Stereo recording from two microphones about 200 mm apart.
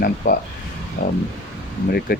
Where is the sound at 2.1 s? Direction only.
45° left (ahead or behind).